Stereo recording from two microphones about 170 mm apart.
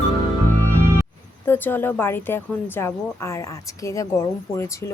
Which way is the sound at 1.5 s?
10° left (ahead or behind).